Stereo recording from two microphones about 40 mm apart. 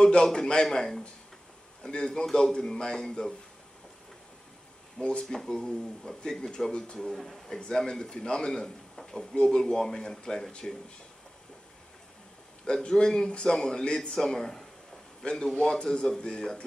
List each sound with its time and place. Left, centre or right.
0.0 s a man's voice: centre
5.0 s a man's voice: centre
6.7 s a man's voice: left
7.1 s speech: centre
7.4 s a man's voice: centre
9.6 s speech: centre
12.6 s a man's voice: centre